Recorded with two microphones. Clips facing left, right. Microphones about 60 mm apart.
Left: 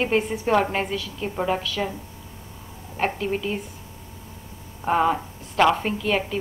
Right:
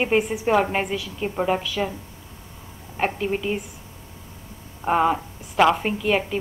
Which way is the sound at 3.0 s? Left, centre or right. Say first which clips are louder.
Right 1 dB; centre.